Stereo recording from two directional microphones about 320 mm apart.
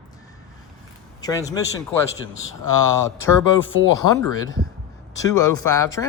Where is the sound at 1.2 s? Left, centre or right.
Centre.